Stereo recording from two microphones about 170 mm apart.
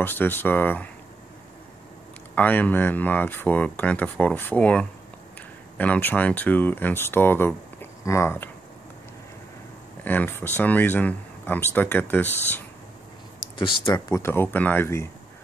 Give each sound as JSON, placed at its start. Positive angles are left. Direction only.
{"t": 0.0, "sound": "speech", "side_deg": 10}
{"t": 2.3, "sound": "speech", "side_deg": 10}
{"t": 10.0, "sound": "speech", "side_deg": 10}
{"t": 13.6, "sound": "speech", "side_deg": 25}